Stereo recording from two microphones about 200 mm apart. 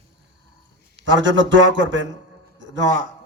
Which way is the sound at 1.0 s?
70° right (ahead or behind).